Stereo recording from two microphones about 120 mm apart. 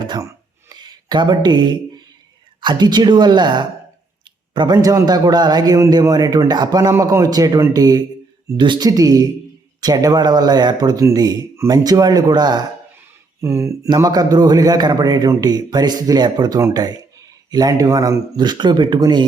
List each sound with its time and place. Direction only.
0.0 s a sound: 35° right (ahead or behind)
0.7 s speech: 35° right (ahead or behind)
13.4 s speech: 25° right (ahead or behind)